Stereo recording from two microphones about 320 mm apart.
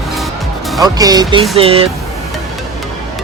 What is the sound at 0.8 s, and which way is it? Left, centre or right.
Speech, centre.